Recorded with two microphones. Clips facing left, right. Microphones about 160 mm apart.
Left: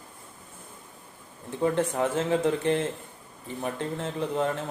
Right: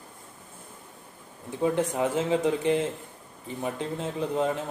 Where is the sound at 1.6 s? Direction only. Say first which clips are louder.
Even; 15° right (ahead or behind).